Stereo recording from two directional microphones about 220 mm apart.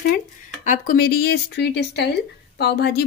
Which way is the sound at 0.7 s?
40° left (ahead or behind).